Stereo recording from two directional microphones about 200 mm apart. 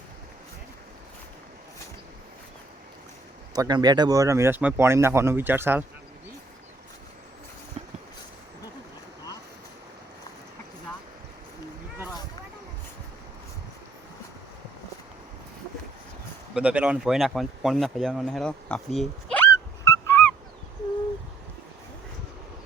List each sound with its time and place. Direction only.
3.5 s speech: 20° right (ahead or behind)
16.6 s speech: 5° right (ahead or behind); by 20.3 s 10° left (ahead or behind)